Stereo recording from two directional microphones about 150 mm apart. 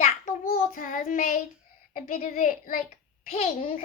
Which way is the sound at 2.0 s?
65° left (ahead or behind).